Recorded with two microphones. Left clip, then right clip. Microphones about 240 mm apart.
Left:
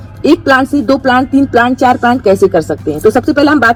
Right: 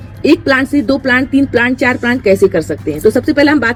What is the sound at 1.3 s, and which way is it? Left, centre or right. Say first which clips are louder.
Speech: left 2 dB; centre.